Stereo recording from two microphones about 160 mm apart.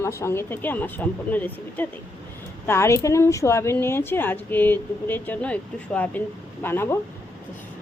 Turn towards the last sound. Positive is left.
turn(degrees=15)  # may be behind; listen again after turning